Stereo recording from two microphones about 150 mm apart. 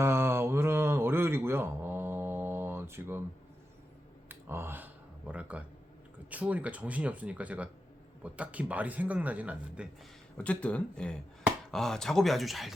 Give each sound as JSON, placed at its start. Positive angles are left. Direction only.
{"t": 0.0, "sound": "music", "side_deg": -15}
{"t": 4.3, "sound": "a sound", "side_deg": -15}
{"t": 6.3, "sound": "speech", "side_deg": -10}
{"t": 10.3, "sound": "speech", "side_deg": 10}